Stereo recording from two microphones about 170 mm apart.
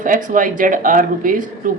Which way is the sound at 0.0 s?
50° right (ahead or behind).